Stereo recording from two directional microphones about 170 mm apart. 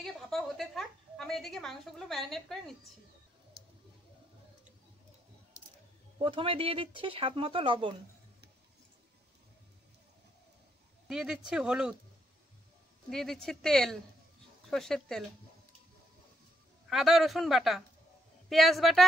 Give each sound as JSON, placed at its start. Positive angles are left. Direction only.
{"t": 0.0, "sound": "a woman's voice", "side_deg": 0}
{"t": 6.1, "sound": "speech", "side_deg": -30}
{"t": 11.1, "sound": "a woman's voice", "side_deg": -5}
{"t": 13.1, "sound": "a woman's voice", "side_deg": 0}
{"t": 16.9, "sound": "a woman's voice", "side_deg": 0}